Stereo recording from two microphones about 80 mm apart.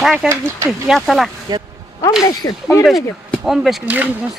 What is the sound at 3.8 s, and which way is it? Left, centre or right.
Speech, right.